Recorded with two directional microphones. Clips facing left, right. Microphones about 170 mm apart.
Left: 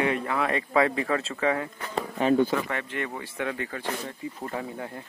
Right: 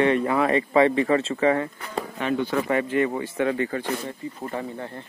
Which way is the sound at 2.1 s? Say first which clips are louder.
Left 4 dB; 35° left (ahead or behind).